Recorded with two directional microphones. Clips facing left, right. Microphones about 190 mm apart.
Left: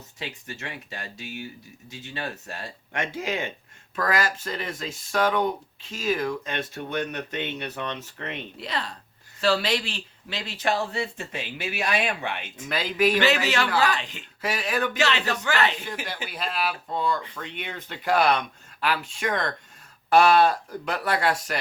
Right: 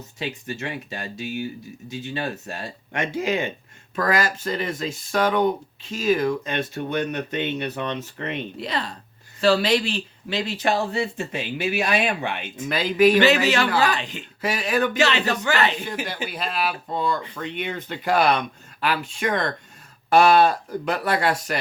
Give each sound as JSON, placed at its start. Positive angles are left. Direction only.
{"t": 0.2, "sound": "speech", "side_deg": -15}
{"t": 2.9, "sound": "speech", "side_deg": 0}
{"t": 8.6, "sound": "speech", "side_deg": -20}
{"t": 12.7, "sound": "speech", "side_deg": 0}
{"t": 13.1, "sound": "speech", "side_deg": -15}
{"t": 14.4, "sound": "speech", "side_deg": 0}
{"t": 14.9, "sound": "speech", "side_deg": -15}
{"t": 16.3, "sound": "speech", "side_deg": 0}
{"t": 19.3, "sound": "speech", "side_deg": -25}
{"t": 20.1, "sound": "speech", "side_deg": 0}